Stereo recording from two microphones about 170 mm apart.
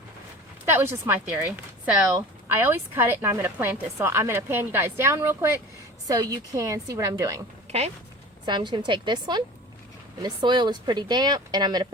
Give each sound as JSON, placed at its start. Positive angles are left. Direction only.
{"t": 0.6, "sound": "speech", "side_deg": -15}
{"t": 8.4, "sound": "speech", "side_deg": -25}